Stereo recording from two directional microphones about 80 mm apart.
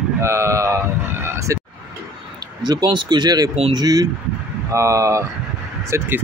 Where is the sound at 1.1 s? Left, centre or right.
Right.